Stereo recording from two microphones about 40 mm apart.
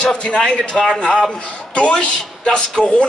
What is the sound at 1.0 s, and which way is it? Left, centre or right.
Speech, left.